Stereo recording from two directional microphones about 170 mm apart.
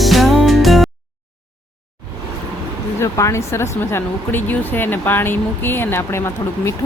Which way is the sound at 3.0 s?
15° left (ahead or behind).